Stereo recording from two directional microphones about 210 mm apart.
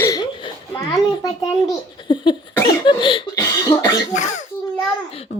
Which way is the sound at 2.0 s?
20° left (ahead or behind).